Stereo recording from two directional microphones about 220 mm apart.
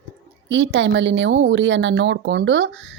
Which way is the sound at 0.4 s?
60° right (ahead or behind).